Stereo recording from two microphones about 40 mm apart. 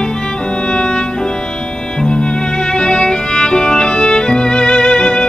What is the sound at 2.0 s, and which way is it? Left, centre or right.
Violin, left.